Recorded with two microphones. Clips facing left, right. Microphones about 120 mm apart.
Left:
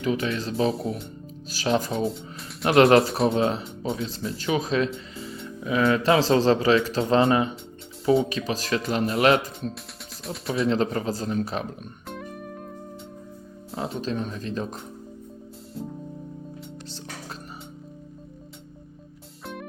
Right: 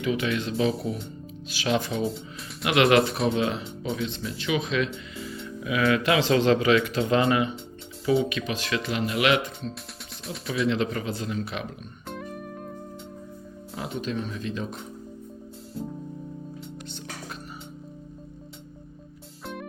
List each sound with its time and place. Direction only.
0.0 s speech: 35° left (ahead or behind)
5.1 s music: 30° left (ahead or behind)
5.6 s speech: 35° left (ahead or behind)
10.2 s speech: centre (ahead or behind)
10.7 s speech: 40° left (ahead or behind)
12.0 s music: centre (ahead or behind)
13.7 s speech: 30° left (ahead or behind)